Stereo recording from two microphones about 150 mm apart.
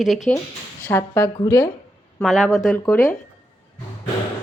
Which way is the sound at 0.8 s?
20° left (ahead or behind).